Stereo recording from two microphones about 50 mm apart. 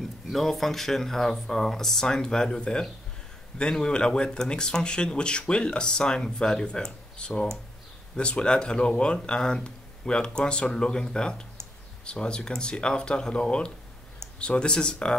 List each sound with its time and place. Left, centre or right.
0.3 s speech: centre